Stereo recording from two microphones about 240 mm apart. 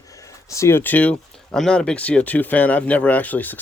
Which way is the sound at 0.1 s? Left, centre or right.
Centre.